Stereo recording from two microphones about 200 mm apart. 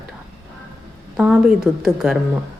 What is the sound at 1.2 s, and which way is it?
Speech, 5° right (ahead or behind).